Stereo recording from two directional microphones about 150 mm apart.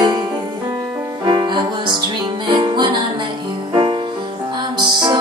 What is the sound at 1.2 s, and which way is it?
Music, 30° right (ahead or behind).